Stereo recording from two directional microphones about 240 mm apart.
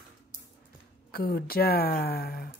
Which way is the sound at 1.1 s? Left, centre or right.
Left.